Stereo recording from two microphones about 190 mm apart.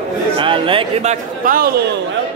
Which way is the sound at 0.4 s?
25° right (ahead or behind).